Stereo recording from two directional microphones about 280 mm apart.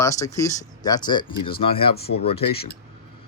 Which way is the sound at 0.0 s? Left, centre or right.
Centre.